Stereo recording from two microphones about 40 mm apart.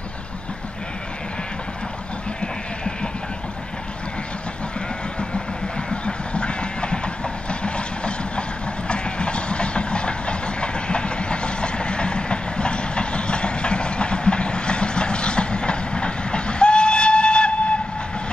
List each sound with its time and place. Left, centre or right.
2.4 s bleat: centre
5.9 s train: left